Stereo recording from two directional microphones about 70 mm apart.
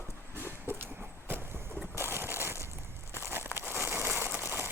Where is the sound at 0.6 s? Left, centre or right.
Right.